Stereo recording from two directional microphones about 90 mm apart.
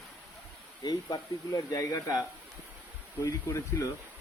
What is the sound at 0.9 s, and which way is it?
Speech, 50° left (ahead or behind).